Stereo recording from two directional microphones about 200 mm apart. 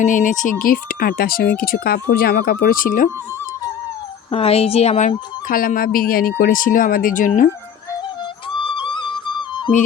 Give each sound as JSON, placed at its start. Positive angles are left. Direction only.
{"t": 0.0, "sound": "speech", "side_deg": 40}
{"t": 4.3, "sound": "speech", "side_deg": 30}
{"t": 8.6, "sound": "music", "side_deg": 25}